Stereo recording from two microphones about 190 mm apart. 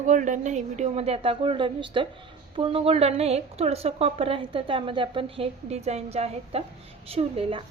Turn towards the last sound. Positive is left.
turn(degrees=-30)  # may be behind; listen again after turning